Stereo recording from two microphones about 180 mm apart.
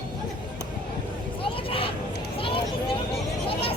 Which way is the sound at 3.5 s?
30° left (ahead or behind).